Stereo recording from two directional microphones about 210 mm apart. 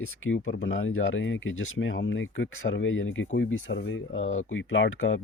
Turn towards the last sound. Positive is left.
turn(degrees=65)  # may be behind; listen again after turning